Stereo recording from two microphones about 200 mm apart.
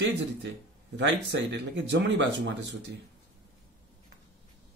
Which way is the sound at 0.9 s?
60° right (ahead or behind).